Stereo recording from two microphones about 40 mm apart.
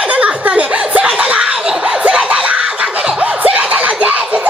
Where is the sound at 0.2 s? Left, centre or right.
Right.